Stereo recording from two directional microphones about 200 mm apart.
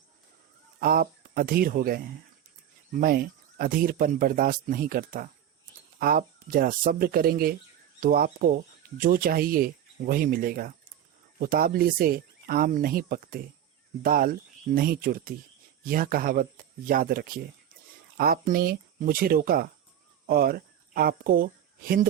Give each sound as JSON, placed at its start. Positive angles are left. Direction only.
{"t": 0.8, "sound": "speech", "side_deg": -45}